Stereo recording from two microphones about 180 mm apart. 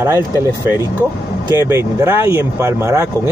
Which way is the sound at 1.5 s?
15° right (ahead or behind).